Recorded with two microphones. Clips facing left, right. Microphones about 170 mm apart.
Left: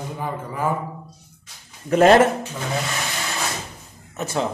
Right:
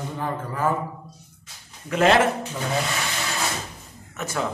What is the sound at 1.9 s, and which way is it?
Speech, 40° left (ahead or behind).